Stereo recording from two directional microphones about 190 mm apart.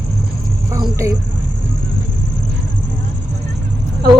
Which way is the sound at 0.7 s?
15° right (ahead or behind).